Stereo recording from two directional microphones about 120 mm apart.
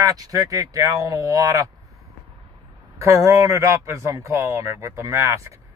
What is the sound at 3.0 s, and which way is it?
Speech, 25° right (ahead or behind).